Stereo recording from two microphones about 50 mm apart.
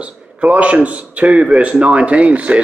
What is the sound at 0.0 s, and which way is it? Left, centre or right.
Speech, right.